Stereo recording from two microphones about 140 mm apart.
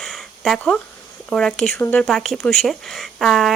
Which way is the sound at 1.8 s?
15° left (ahead or behind).